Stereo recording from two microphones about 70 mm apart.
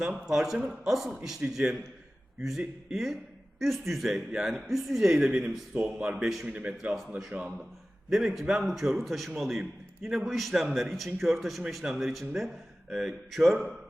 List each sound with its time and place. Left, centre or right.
0.0 s a man's voice: centre
6.5 s a man's voice: centre
8.1 s a man's voice: centre